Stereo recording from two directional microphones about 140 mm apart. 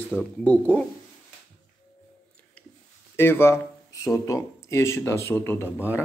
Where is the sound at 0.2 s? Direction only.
10° left (ahead or behind).